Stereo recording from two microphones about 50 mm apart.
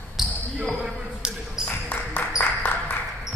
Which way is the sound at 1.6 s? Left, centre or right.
Left.